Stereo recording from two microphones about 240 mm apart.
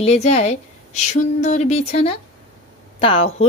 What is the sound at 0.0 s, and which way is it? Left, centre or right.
A woman's voice, left.